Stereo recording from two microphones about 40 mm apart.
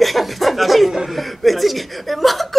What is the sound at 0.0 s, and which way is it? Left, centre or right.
Chuckle, centre.